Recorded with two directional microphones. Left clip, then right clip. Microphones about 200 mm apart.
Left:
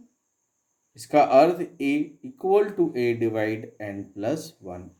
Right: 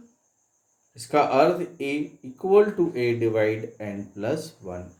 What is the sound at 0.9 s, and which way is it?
Speech, 45° left (ahead or behind).